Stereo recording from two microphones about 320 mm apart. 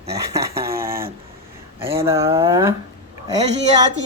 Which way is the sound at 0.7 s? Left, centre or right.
Right.